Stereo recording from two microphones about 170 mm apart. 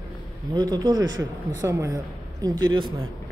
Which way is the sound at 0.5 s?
25° right (ahead or behind).